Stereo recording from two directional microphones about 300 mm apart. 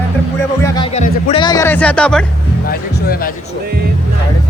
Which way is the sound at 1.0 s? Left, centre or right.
Left.